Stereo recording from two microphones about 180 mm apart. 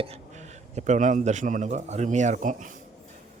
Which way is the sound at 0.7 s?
40° right (ahead or behind).